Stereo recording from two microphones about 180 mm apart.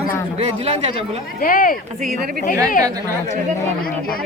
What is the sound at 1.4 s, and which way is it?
Speech, 50° left (ahead or behind).